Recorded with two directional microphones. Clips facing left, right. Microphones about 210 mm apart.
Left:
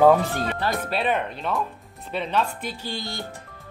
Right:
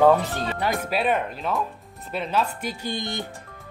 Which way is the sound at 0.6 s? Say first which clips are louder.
Right 3 dB; 5° right (ahead or behind).